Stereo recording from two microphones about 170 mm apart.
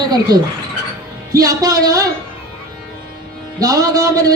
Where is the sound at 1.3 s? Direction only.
20° right (ahead or behind).